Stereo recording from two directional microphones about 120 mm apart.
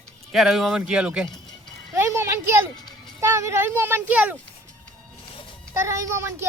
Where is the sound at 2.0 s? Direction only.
20° right (ahead or behind).